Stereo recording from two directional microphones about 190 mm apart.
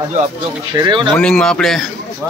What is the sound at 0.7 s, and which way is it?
Speech, 25° right (ahead or behind).